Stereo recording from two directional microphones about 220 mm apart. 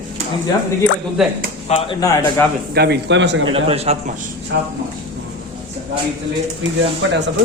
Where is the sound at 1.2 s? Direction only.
Centre (ahead or behind).